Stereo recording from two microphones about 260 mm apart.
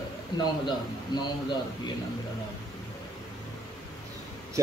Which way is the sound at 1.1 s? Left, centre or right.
Centre.